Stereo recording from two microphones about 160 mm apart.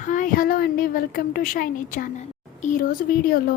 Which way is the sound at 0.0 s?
55° left (ahead or behind).